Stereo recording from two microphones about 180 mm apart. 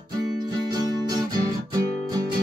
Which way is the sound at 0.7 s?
20° right (ahead or behind).